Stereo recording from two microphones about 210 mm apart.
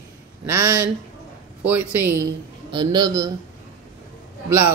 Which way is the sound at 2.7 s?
20° right (ahead or behind).